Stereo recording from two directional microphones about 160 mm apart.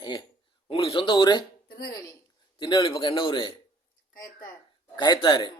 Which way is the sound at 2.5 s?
30° left (ahead or behind).